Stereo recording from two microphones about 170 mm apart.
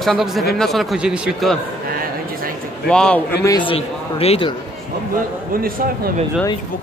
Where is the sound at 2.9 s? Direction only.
5° left (ahead or behind).